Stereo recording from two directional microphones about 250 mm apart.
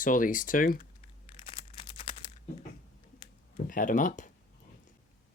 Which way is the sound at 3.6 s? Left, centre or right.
Left.